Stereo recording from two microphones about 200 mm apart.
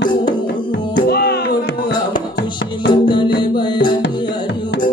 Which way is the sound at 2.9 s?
25° left (ahead or behind).